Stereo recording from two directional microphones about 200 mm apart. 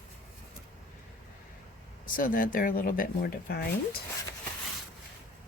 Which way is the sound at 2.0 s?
45° left (ahead or behind).